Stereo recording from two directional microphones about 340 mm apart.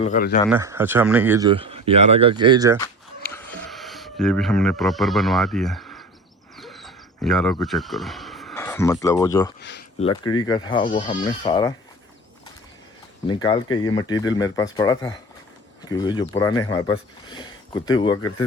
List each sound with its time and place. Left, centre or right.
0.0 s speech: left
0.5 s speech: centre
2.8 s a sound: centre
7.6 s speech: centre
9.6 s speech: left
10.0 s speech: centre
13.2 s speech: centre